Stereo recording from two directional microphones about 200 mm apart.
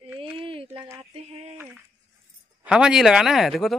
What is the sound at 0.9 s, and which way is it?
Speech, 30° right (ahead or behind).